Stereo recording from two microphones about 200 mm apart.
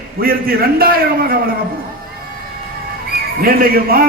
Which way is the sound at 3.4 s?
50° right (ahead or behind).